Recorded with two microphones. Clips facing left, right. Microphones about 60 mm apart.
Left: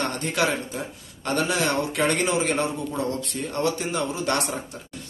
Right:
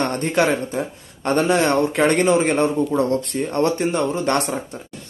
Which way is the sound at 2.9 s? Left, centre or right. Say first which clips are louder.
Right 8 dB; right.